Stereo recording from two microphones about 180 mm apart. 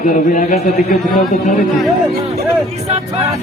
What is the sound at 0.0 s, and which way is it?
Speech, 45° left (ahead or behind).